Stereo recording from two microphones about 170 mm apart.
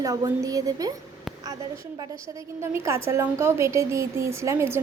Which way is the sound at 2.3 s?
15° right (ahead or behind).